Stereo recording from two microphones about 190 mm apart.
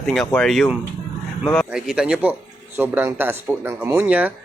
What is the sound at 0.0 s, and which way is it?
A man's voice, centre (ahead or behind).